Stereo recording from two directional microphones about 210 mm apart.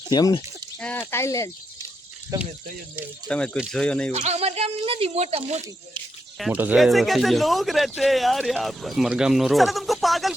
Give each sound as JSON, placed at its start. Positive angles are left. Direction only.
{"t": 0.1, "sound": "speech", "side_deg": 20}
{"t": 0.8, "sound": "speech", "side_deg": 5}
{"t": 3.2, "sound": "speech", "side_deg": 5}
{"t": 4.1, "sound": "speech", "side_deg": -30}
{"t": 6.4, "sound": "speech", "side_deg": -5}